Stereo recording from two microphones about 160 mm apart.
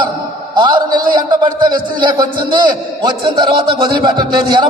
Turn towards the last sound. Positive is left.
turn(degrees=-30)  # may be behind; listen again after turning